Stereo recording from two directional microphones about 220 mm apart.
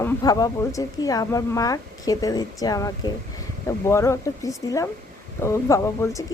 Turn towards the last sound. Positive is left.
turn(degrees=15)  # may be behind; listen again after turning